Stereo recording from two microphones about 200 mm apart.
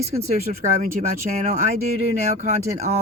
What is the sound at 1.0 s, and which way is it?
Speech, 40° right (ahead or behind).